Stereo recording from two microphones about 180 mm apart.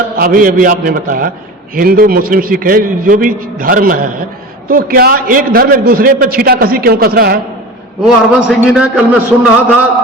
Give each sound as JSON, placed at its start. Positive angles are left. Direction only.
{"t": 0.2, "sound": "a man's voice", "side_deg": -50}
{"t": 8.0, "sound": "a man's voice", "side_deg": -5}